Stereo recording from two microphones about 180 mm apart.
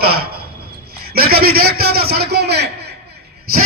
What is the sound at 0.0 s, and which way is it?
A man's voice, 60° right (ahead or behind).